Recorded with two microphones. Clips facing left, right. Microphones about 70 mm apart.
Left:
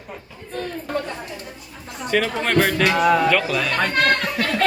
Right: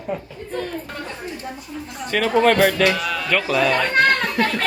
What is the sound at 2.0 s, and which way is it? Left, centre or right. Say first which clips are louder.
Speech: right 5 dB; centre.